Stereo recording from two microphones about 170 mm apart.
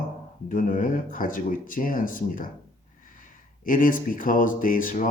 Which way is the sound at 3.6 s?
55° left (ahead or behind).